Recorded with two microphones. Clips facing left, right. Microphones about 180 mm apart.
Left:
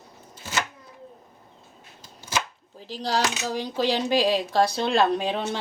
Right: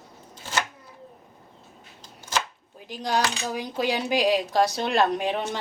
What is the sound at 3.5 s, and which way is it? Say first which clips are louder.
Speech: left 2 dB; 30° left (ahead or behind).